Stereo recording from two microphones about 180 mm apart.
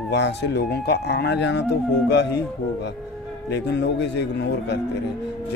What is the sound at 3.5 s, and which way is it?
Speech, 70° left (ahead or behind).